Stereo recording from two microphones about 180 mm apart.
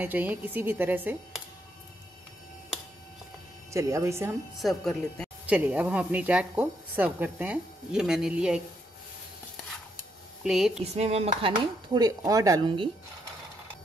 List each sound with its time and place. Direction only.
0.0 s a woman's voice: 10° right (ahead or behind)
3.7 s a woman's voice: 15° right (ahead or behind)
4.6 s speech: centre (ahead or behind)
5.5 s a woman's voice: 10° right (ahead or behind)
10.4 s speech: 5° right (ahead or behind)
10.8 s speech: 35° right (ahead or behind)
11.9 s speech: 20° right (ahead or behind)